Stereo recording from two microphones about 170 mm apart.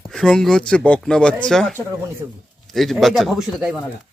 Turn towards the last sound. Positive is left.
turn(degrees=0)  # may be behind; listen again after turning